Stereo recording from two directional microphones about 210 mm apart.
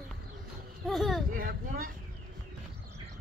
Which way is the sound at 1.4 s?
45° right (ahead or behind).